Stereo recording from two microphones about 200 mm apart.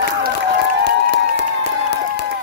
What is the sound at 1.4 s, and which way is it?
Crowd, 55° left (ahead or behind).